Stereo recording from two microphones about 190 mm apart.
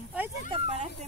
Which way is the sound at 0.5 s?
35° right (ahead or behind).